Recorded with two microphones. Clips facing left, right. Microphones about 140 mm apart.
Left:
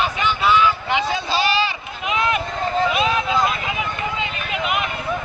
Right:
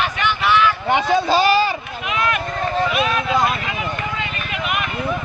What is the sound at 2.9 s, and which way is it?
Vehicle, 20° left (ahead or behind).